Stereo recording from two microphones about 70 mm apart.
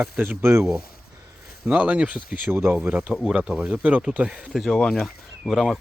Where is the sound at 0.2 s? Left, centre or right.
Right.